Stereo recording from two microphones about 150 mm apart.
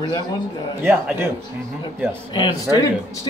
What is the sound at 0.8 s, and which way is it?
Speech, 15° right (ahead or behind).